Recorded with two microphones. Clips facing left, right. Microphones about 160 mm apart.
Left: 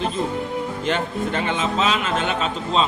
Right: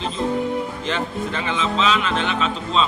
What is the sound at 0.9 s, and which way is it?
A man's voice, 50° left (ahead or behind).